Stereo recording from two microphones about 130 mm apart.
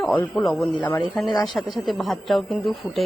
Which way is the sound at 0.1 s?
15° left (ahead or behind).